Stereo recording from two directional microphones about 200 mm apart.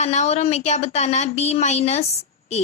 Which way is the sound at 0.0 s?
35° left (ahead or behind).